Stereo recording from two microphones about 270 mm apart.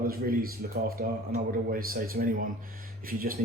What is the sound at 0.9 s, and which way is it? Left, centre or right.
Speech, right.